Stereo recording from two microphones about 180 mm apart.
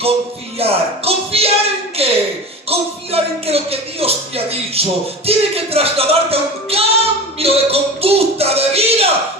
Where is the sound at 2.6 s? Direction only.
35° right (ahead or behind).